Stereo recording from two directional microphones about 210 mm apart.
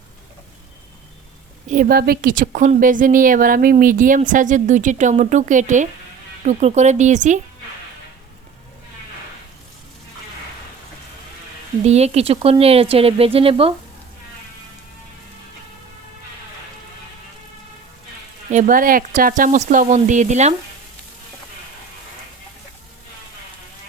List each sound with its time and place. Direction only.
1.6 s a woman's voice: 40° right (ahead or behind)
11.8 s speech: 30° right (ahead or behind)
18.5 s a woman's voice: 40° right (ahead or behind)